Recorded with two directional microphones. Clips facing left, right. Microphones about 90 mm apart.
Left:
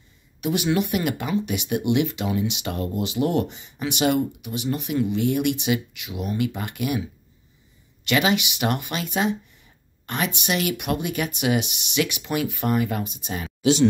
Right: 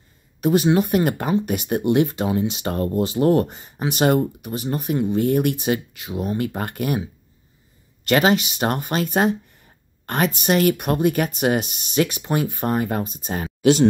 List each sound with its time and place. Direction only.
0.4 s speech: 40° right (ahead or behind)